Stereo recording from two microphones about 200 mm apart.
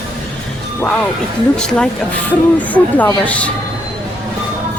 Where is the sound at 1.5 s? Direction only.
5° left (ahead or behind).